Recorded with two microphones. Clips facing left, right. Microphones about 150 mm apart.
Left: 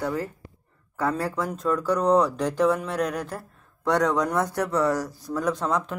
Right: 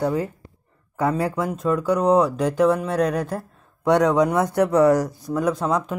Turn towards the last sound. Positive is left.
turn(degrees=-5)  # may be behind; listen again after turning